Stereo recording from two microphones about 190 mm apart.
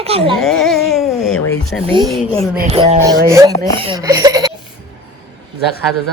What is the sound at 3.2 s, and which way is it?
Speech, 15° right (ahead or behind).